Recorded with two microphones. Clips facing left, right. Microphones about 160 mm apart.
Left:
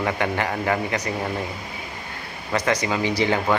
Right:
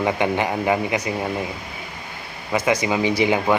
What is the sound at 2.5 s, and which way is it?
Speech, 10° right (ahead or behind).